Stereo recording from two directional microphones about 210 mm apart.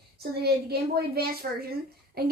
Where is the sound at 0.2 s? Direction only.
50° right (ahead or behind).